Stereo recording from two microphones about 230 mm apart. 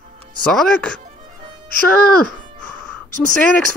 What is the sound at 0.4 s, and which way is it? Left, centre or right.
Speech, centre.